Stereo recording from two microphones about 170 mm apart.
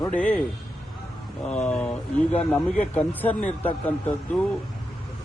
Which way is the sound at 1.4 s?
5° left (ahead or behind).